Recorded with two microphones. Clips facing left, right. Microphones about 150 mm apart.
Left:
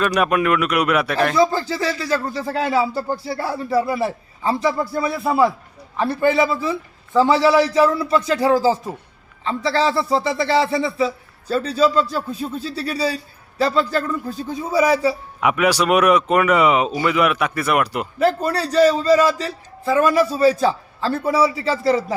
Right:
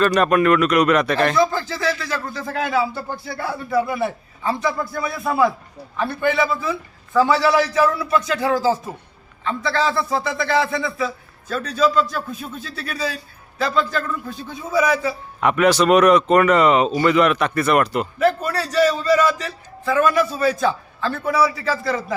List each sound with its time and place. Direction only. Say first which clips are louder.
0.0 s speech: right 2 dB; 10° left (ahead or behind)
1.4 s a man's voice: left 2 dB; 35° left (ahead or behind)
15.4 s speech: right 3 dB; 10° left (ahead or behind)
18.2 s a man's voice: left 2 dB; 30° left (ahead or behind)